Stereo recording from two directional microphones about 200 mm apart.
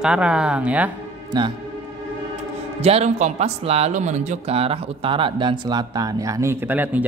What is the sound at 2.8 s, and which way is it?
Speech, 30° right (ahead or behind).